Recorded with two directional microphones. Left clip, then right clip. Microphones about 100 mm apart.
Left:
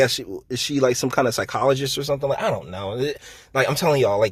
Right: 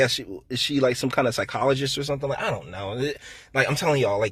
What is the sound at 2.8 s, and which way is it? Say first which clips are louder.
Speech: left 3 dB; 20° left (ahead or behind).